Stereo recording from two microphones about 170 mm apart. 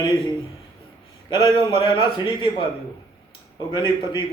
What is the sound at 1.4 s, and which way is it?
Speech, 20° right (ahead or behind).